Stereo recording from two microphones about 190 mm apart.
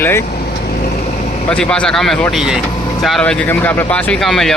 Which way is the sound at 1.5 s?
5° left (ahead or behind).